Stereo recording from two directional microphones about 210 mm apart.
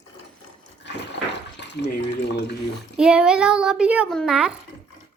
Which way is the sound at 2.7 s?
5° right (ahead or behind).